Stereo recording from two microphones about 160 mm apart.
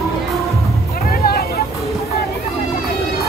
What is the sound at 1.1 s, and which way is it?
Vehicle, 70° left (ahead or behind).